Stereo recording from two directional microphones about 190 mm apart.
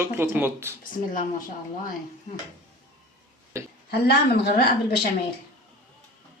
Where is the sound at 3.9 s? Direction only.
55° left (ahead or behind).